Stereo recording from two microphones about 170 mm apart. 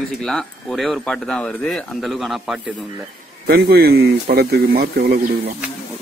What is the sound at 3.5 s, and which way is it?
Speech, 65° right (ahead or behind).